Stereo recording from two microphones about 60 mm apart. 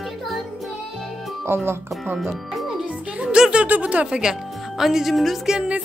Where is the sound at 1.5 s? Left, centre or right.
Right.